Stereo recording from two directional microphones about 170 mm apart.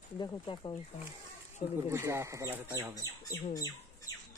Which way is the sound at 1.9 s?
15° right (ahead or behind).